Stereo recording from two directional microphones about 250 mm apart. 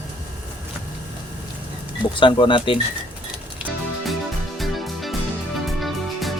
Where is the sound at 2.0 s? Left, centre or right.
Centre.